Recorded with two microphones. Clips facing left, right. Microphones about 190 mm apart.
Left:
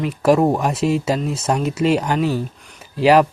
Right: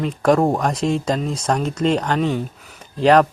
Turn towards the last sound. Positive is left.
turn(degrees=5)  # may be behind; listen again after turning